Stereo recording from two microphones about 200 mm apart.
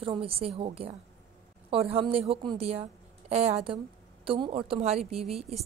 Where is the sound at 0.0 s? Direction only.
30° right (ahead or behind).